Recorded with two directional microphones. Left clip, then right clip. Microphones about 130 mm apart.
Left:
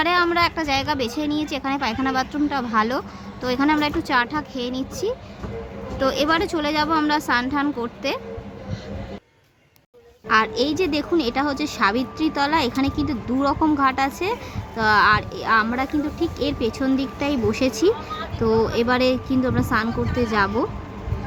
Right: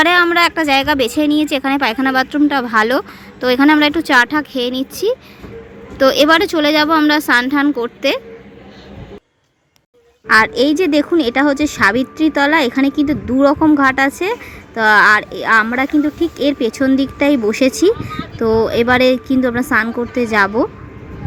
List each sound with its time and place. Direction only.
0.0 s a sound: 45° right (ahead or behind)
0.3 s speech: 40° right (ahead or behind)
10.2 s speech: 50° right (ahead or behind)